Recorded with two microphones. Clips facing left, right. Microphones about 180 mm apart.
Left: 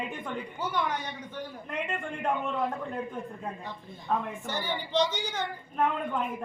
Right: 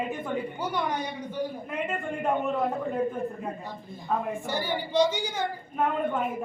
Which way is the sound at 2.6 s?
5° right (ahead or behind).